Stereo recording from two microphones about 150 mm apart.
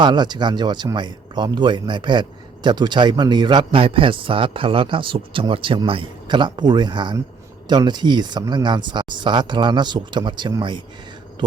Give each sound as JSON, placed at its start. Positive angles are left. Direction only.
{"t": 0.0, "sound": "a man's voice", "side_deg": -30}